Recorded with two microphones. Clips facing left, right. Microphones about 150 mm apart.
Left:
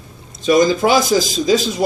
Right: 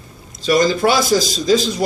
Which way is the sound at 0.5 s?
15° left (ahead or behind).